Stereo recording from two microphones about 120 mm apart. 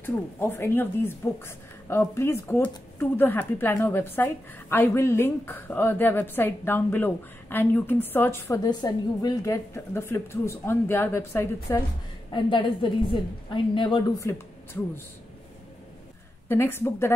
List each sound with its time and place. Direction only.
0.0 s speech: 20° left (ahead or behind)
8.6 s a woman's voice: 35° left (ahead or behind)
12.3 s a woman's voice: 40° left (ahead or behind)
14.1 s speech: 25° left (ahead or behind)
16.4 s a woman's voice: 20° left (ahead or behind)